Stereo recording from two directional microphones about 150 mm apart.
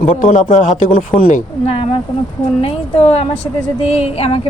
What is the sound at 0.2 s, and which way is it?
Speech, 60° left (ahead or behind).